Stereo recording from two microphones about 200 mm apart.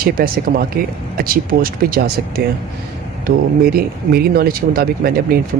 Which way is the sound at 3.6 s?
50° right (ahead or behind).